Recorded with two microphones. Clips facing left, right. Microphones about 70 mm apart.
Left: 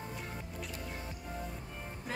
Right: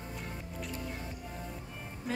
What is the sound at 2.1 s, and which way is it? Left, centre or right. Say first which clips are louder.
Music: right 4 dB; centre.